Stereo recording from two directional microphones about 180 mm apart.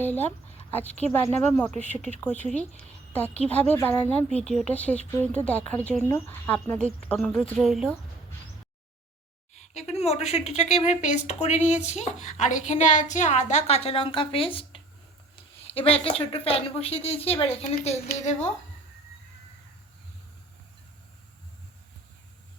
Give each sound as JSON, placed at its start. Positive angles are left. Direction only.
{"t": 0.0, "sound": "a woman's voice", "side_deg": 10}
{"t": 9.6, "sound": "speech", "side_deg": 35}